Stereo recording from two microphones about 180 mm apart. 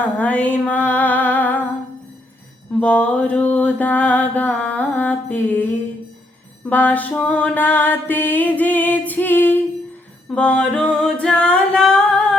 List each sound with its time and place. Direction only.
0.0 s music: 10° left (ahead or behind)
2.8 s music: 10° left (ahead or behind)
6.7 s music: 10° left (ahead or behind)
10.2 s singing: 5° left (ahead or behind)